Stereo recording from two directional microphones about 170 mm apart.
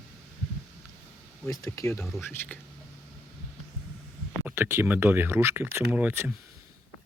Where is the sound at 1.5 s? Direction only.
15° left (ahead or behind).